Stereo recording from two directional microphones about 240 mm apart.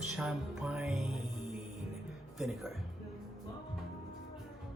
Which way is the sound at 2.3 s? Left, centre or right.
Centre.